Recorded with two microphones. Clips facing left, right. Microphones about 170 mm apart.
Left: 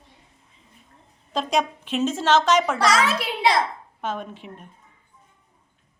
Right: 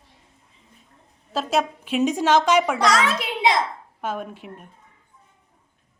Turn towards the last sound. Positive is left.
turn(degrees=-5)  # may be behind; listen again after turning